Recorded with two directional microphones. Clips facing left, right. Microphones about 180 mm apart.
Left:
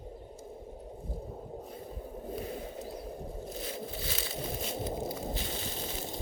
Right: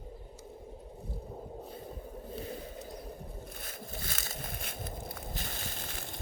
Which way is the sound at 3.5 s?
50° right (ahead or behind).